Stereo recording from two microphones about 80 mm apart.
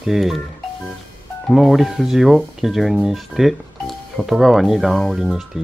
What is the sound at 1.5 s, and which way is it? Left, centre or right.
Speech, centre.